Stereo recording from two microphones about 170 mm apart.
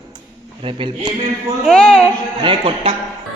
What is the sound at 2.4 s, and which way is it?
Speech, 30° right (ahead or behind).